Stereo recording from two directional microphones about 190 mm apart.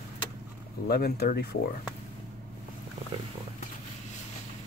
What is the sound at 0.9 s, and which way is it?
Speech, 55° left (ahead or behind).